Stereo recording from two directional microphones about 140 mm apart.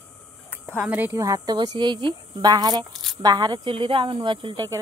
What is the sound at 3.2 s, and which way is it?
Speech, 30° right (ahead or behind).